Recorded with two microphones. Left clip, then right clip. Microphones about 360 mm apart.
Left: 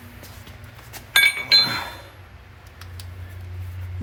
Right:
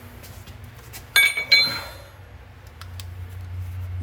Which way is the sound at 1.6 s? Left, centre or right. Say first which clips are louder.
Left 1 dB; left.